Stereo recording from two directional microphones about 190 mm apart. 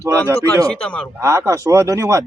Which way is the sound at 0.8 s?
5° left (ahead or behind).